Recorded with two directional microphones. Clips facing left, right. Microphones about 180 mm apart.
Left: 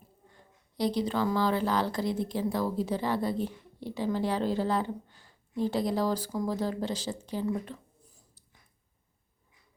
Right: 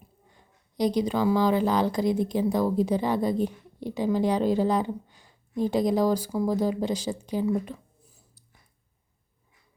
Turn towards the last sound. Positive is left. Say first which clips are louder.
# right 5 dB
turn(degrees=-10)  # may be behind; listen again after turning